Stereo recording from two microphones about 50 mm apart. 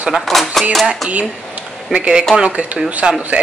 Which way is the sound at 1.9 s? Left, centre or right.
Centre.